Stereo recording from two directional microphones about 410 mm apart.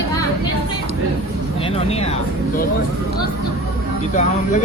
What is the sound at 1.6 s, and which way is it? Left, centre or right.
Speech, centre.